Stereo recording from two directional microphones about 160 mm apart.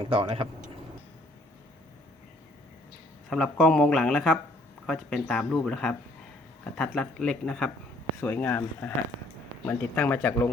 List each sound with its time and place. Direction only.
0.0 s speech: 30° right (ahead or behind)
3.2 s speech: 5° left (ahead or behind)